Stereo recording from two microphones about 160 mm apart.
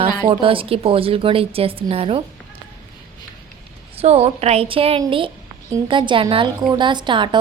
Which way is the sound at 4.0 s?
40° right (ahead or behind).